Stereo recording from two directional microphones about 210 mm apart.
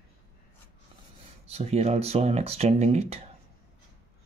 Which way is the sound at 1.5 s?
30° right (ahead or behind).